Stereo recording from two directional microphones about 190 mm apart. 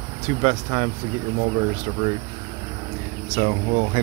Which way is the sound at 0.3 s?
35° right (ahead or behind).